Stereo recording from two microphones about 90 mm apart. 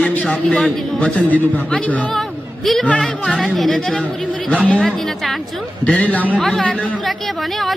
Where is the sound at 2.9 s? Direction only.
5° left (ahead or behind).